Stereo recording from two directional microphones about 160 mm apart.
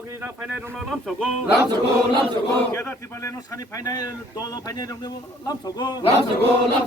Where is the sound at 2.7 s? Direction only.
15° left (ahead or behind).